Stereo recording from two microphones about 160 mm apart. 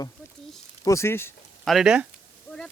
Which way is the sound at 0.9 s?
15° left (ahead or behind).